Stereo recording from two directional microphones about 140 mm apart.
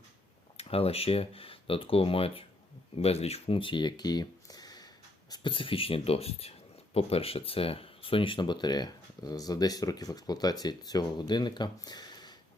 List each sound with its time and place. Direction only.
0.5 s speech: 45° left (ahead or behind); by 12.4 s 30° left (ahead or behind)